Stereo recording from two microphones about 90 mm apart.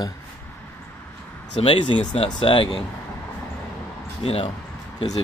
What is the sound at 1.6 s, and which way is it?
Speech, 90° left.